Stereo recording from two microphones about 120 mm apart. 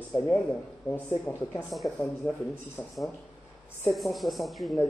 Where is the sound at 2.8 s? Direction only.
30° left (ahead or behind).